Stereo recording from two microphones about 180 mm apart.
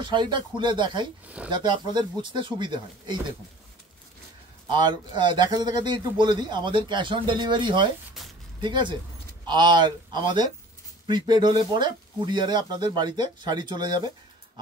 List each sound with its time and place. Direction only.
0.0 s a man's voice: 25° right (ahead or behind)
1.2 s speech: 5° right (ahead or behind)
1.5 s a man's voice: 25° right (ahead or behind)
4.6 s a man's voice: 25° right (ahead or behind)